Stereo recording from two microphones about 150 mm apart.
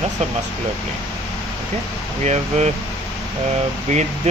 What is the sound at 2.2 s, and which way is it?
Speech, 50° right (ahead or behind).